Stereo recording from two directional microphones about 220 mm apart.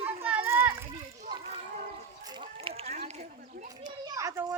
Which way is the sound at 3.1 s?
30° right (ahead or behind).